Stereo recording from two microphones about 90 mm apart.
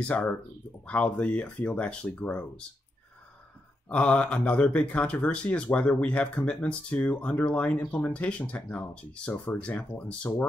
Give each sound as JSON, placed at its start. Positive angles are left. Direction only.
{"t": 0.0, "sound": "speech", "side_deg": 15}
{"t": 3.9, "sound": "speech", "side_deg": 15}